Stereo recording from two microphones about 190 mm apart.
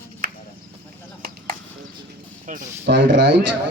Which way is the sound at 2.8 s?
65° right (ahead or behind).